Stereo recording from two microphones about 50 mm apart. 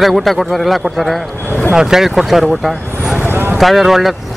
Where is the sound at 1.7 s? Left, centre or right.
Centre.